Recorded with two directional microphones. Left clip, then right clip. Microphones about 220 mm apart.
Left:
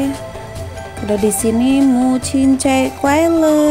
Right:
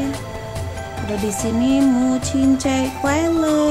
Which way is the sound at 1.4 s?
20° left (ahead or behind).